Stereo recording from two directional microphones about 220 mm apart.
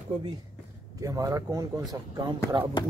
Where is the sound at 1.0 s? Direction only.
15° right (ahead or behind).